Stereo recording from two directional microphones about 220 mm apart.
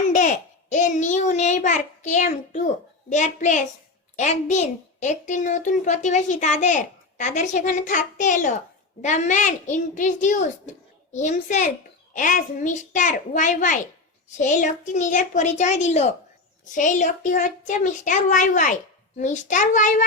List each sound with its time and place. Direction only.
0.1 s a child's voice: 35° left (ahead or behind)